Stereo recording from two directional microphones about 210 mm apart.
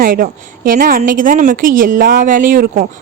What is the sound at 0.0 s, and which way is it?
A woman's voice, 40° right (ahead or behind).